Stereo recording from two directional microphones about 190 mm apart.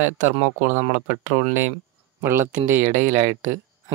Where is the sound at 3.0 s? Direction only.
40° right (ahead or behind).